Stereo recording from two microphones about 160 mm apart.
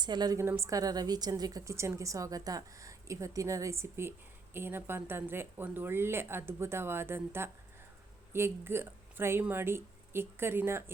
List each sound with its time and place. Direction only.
0.0 s a woman's voice: 25° right (ahead or behind)